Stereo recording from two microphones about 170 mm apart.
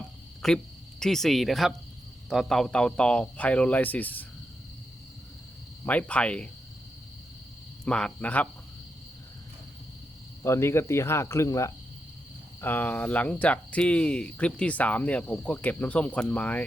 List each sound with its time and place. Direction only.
0.4 s speech: 5° left (ahead or behind)
5.8 s speech: 10° left (ahead or behind)
7.9 s speech: 5° left (ahead or behind)
10.4 s speech: 15° left (ahead or behind)